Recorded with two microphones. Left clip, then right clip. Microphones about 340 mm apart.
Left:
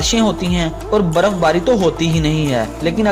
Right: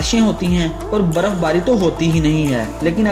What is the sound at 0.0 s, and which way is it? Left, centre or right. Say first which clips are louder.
Speech: left 1 dB; left.